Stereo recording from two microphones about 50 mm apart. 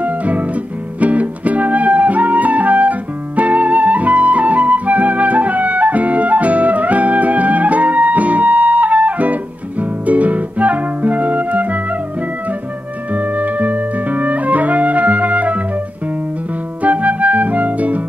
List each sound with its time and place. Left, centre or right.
0.0 s music: right
13.1 s music: right
16.8 s music: right